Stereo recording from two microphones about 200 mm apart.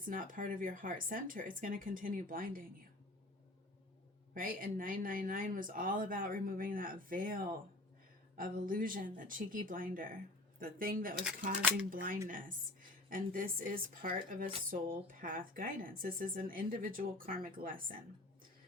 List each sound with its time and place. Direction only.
0.1 s speech: 45° right (ahead or behind)
4.4 s speech: 45° right (ahead or behind)
8.4 s speech: 45° right (ahead or behind)